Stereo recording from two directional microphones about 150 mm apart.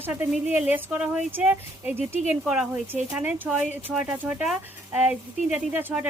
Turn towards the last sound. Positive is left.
turn(degrees=-10)  # may be behind; listen again after turning